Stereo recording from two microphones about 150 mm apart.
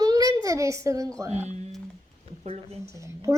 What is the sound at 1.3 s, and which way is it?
Speech, 50° right (ahead or behind).